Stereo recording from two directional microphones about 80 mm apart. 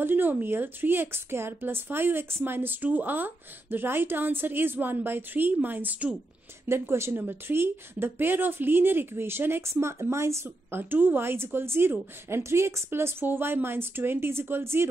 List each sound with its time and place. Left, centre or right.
0.0 s speech: right
6.7 s speech: right